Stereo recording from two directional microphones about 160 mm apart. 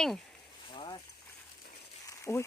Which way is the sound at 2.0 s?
20° left (ahead or behind).